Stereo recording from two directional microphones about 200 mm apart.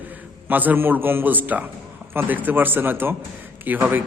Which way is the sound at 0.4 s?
10° right (ahead or behind).